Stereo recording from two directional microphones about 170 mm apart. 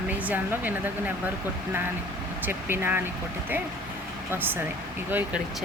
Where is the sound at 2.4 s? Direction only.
10° right (ahead or behind).